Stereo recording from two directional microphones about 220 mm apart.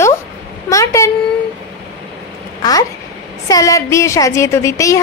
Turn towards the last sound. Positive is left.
turn(degrees=15)  # may be behind; listen again after turning